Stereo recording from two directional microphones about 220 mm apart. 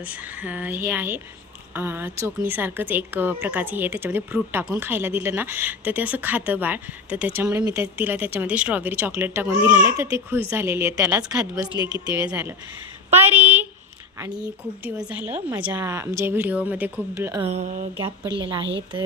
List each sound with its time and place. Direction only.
0.4 s a woman's voice: 5° right (ahead or behind)
11.7 s a woman's voice: 20° left (ahead or behind)
12.0 s a woman's voice: 5° right (ahead or behind)
17.4 s a sound: 30° right (ahead or behind)
18.0 s speech: 20° right (ahead or behind)